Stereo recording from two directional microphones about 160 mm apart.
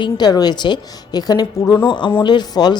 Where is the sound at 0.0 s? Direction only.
25° left (ahead or behind).